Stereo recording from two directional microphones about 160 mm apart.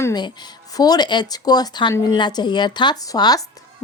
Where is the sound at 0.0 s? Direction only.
25° left (ahead or behind).